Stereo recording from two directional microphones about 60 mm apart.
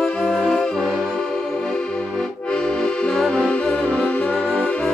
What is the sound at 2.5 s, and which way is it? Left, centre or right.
Accordion, centre.